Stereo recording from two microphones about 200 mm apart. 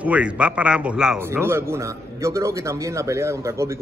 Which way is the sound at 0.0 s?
5° right (ahead or behind).